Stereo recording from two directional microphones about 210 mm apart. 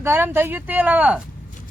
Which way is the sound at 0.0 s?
10° right (ahead or behind).